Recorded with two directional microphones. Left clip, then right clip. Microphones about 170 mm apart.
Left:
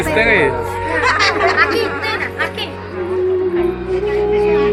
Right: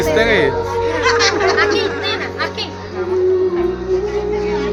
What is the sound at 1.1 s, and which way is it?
Music, 25° left (ahead or behind).